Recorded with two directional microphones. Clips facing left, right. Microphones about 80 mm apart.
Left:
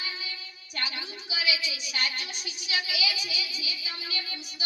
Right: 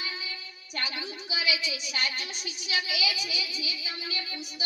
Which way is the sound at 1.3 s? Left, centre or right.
Right.